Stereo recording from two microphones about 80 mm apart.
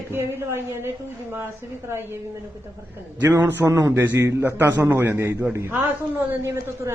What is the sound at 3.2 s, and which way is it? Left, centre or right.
Speech, right.